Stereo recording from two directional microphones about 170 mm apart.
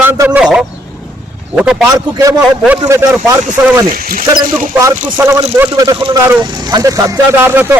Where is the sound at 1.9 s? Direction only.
20° right (ahead or behind).